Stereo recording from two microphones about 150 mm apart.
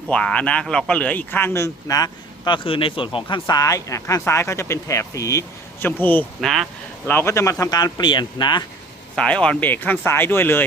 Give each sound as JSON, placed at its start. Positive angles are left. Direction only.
{"t": 0.1, "sound": "speech", "side_deg": 5}
{"t": 6.4, "sound": "speech", "side_deg": 0}
{"t": 7.1, "sound": "speech", "side_deg": 15}
{"t": 9.1, "sound": "speech", "side_deg": 5}